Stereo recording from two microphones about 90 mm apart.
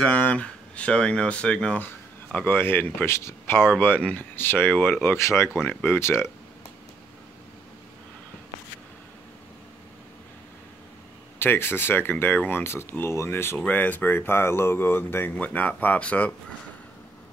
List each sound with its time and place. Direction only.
0.0 s speech: 15° left (ahead or behind); by 5.5 s 30° left (ahead or behind)
5.6 s speech: 20° left (ahead or behind)
11.3 s speech: 25° left (ahead or behind)